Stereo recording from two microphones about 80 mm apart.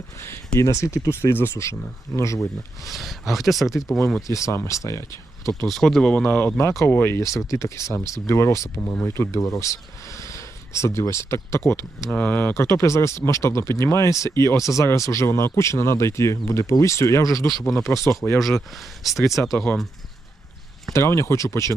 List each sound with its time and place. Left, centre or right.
0.2 s speech: left
2.8 s speech: centre
4.3 s speech: left
5.6 s speech: centre
6.2 s speech: left
7.2 s speech: left
12.1 s speech: left
12.5 s speech: left
17.5 s speech: centre
18.2 s speech: centre
19.0 s speech: centre
19.5 s speech: centre
20.9 s speech: left